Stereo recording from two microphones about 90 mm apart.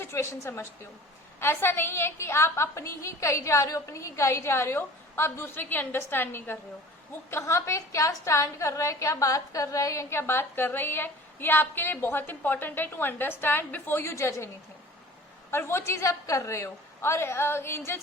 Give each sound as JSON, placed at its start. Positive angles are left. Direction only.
{"t": 0.0, "sound": "a woman's voice", "side_deg": 30}